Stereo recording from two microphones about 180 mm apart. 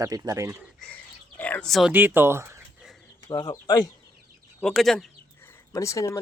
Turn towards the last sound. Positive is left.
turn(degrees=20)  # may be behind; listen again after turning